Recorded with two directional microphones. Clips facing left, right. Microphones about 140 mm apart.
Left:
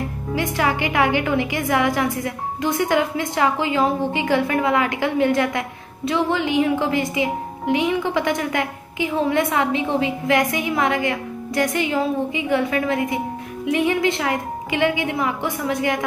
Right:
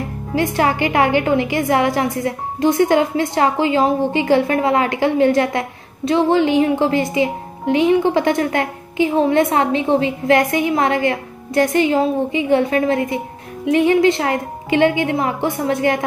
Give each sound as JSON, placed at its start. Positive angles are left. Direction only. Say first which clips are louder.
{"t": 0.4, "sound": "a woman's voice", "louder": "right 5 dB", "side_deg": -35}